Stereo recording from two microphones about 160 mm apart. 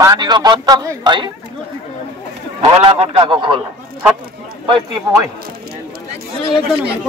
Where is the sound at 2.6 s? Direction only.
35° right (ahead or behind).